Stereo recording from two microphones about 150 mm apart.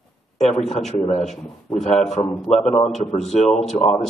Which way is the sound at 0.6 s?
Centre (ahead or behind).